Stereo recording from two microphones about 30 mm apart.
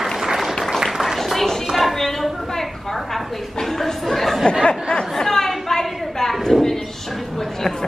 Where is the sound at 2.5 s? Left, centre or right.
Centre.